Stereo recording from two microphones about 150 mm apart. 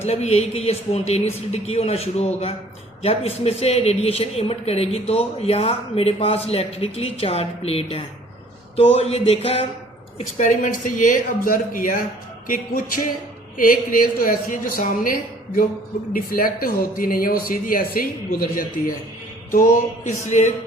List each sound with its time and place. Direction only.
0.0 s speech: 45° left (ahead or behind)
10.3 s speech: 55° left (ahead or behind)
20.1 s speech: 50° left (ahead or behind)